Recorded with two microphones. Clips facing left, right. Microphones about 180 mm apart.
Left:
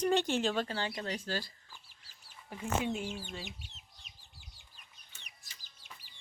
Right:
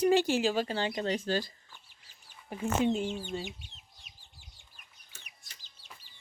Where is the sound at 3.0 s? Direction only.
25° right (ahead or behind).